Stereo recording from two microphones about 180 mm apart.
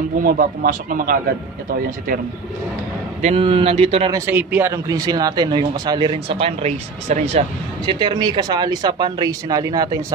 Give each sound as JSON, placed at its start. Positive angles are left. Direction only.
{"t": 0.2, "sound": "speech", "side_deg": -50}
{"t": 3.2, "sound": "a man's voice", "side_deg": -35}
{"t": 4.1, "sound": "speech", "side_deg": -10}